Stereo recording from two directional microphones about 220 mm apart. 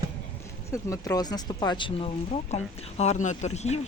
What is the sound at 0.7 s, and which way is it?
Speech, 15° left (ahead or behind).